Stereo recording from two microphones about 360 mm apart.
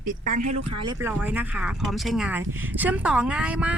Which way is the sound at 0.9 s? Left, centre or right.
Centre.